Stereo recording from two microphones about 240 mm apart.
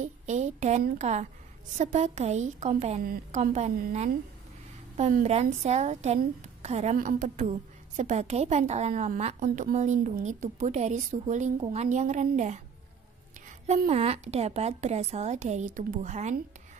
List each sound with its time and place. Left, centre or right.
0.0 s a woman's voice: right
13.7 s a woman's voice: right